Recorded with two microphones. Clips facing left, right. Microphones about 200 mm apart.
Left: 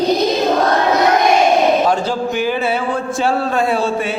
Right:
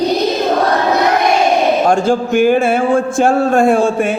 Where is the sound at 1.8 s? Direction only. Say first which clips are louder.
Right 4 dB; 50° right (ahead or behind).